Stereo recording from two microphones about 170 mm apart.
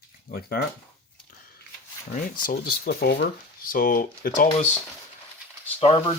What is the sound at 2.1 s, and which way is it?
Speech, 60° left (ahead or behind).